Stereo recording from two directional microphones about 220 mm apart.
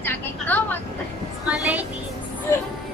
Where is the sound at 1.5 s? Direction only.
5° right (ahead or behind).